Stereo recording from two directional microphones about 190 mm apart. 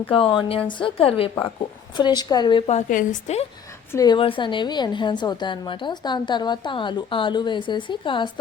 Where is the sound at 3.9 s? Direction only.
20° left (ahead or behind).